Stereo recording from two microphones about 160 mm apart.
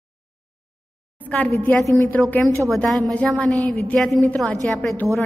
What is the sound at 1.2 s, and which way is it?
A woman's voice, 10° left (ahead or behind).